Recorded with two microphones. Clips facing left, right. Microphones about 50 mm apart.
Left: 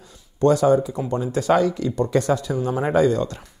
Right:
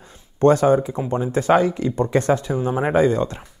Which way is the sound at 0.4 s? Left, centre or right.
Right.